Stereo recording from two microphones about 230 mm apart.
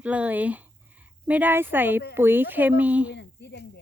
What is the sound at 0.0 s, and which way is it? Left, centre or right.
Speech, centre.